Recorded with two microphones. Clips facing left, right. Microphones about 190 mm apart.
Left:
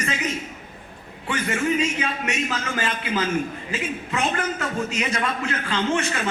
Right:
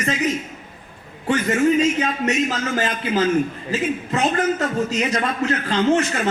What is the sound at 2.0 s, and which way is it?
A man's voice, 40° right (ahead or behind).